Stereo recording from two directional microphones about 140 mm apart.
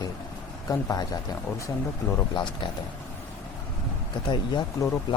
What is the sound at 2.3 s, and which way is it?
Speech, 35° left (ahead or behind).